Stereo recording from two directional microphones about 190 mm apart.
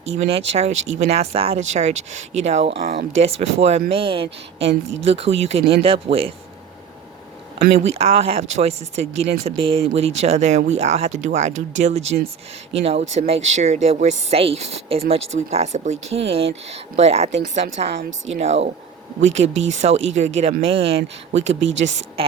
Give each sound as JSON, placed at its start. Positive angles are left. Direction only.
{"t": 0.0, "sound": "speech", "side_deg": -35}
{"t": 2.8, "sound": "speech", "side_deg": -50}
{"t": 3.2, "sound": "speech", "side_deg": -35}
{"t": 4.7, "sound": "speech", "side_deg": -80}
{"t": 5.0, "sound": "speech", "side_deg": -30}
{"t": 7.7, "sound": "speech", "side_deg": -30}
{"t": 21.4, "sound": "speech", "side_deg": -80}